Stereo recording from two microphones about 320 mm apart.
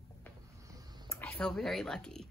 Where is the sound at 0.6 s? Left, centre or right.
Centre.